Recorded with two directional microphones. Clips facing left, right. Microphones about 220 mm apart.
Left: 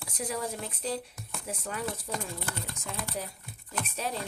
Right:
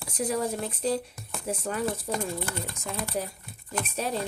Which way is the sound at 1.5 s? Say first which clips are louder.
Right 6 dB; 40° right (ahead or behind).